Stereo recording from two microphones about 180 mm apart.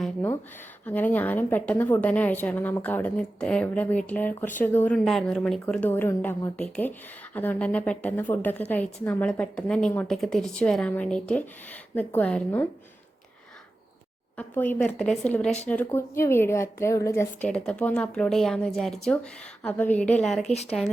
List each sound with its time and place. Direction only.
0.9 s speech: 10° left (ahead or behind)
14.3 s speech: 10° left (ahead or behind)
20.4 s a woman's voice: 35° left (ahead or behind)